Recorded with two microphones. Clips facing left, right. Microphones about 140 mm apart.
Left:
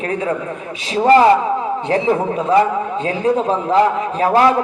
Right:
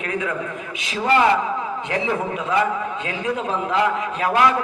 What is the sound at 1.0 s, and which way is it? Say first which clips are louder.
A man's voice: left 7 dB; 35° left (ahead or behind).